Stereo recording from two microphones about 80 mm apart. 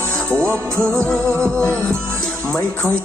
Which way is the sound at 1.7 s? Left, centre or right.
Right.